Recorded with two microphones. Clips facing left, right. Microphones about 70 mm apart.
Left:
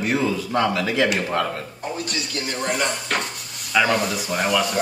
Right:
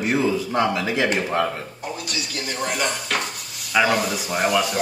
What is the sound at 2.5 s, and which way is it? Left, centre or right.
Speech, centre.